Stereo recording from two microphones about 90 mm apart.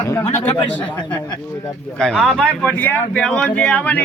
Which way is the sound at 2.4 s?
15° left (ahead or behind).